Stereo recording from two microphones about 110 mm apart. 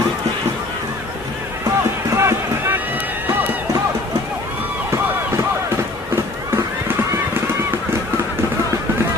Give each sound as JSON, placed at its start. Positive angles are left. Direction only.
{"t": 2.1, "sound": "run", "side_deg": -25}